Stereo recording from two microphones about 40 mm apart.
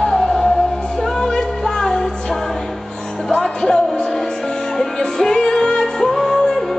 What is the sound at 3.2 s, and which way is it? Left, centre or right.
Music, centre.